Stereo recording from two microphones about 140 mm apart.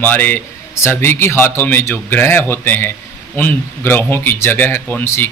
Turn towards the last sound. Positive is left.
turn(degrees=15)  # may be behind; listen again after turning